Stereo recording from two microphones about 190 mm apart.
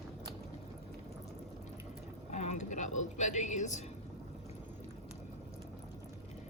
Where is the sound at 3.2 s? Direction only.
40° left (ahead or behind).